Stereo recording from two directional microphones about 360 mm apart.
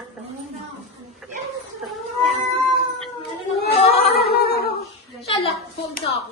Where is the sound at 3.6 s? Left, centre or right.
Centre.